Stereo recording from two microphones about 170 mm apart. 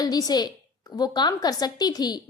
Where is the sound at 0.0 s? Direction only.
20° left (ahead or behind).